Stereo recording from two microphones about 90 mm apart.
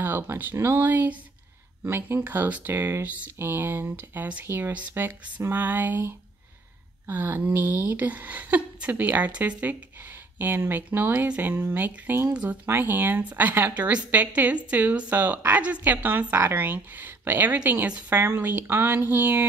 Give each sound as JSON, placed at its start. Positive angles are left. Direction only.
{"t": 0.0, "sound": "a woman's voice", "side_deg": -25}